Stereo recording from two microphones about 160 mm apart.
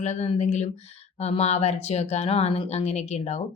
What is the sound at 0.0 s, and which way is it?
Speech, 45° left (ahead or behind).